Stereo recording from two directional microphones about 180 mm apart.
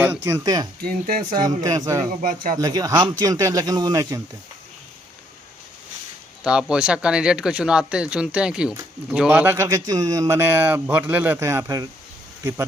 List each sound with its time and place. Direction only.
0.3 s speech: 15° right (ahead or behind)
0.8 s speech: 50° right (ahead or behind)
1.6 s speech: 20° right (ahead or behind)
2.2 s speech: 50° right (ahead or behind)
2.6 s speech: 20° right (ahead or behind)
6.4 s speech: 5° right (ahead or behind)